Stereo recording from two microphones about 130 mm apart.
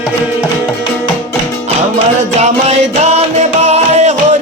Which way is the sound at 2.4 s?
60° right (ahead or behind).